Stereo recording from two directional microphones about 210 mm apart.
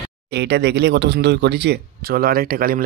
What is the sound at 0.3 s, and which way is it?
Speech, 50° right (ahead or behind).